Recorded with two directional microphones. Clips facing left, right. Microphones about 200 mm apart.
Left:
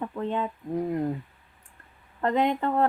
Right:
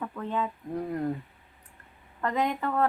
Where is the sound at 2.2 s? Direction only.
30° left (ahead or behind).